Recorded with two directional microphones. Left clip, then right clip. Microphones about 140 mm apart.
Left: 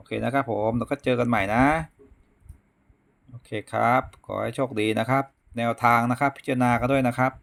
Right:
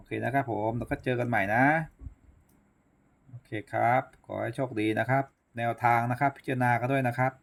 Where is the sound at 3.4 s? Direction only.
40° left (ahead or behind).